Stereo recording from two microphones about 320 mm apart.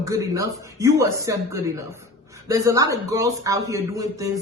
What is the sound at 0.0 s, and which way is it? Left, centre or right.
A man's voice, centre.